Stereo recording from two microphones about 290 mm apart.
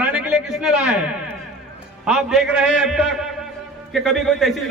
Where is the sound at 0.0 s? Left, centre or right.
Centre.